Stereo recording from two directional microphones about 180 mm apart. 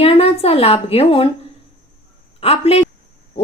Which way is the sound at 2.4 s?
35° left (ahead or behind).